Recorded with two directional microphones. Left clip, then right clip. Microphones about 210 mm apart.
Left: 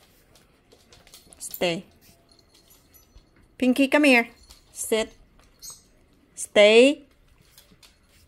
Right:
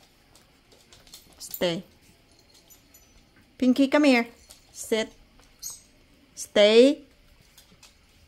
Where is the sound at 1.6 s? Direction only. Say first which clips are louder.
Left 1 dB; 15° right (ahead or behind).